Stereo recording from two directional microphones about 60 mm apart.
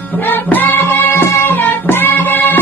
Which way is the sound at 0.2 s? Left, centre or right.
Left.